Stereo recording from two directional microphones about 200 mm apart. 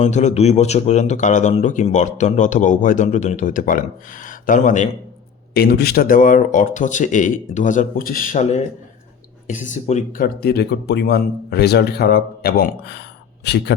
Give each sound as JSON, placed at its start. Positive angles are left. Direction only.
{"t": 0.0, "sound": "a man's voice", "side_deg": 35}
{"t": 5.5, "sound": "a man's voice", "side_deg": 50}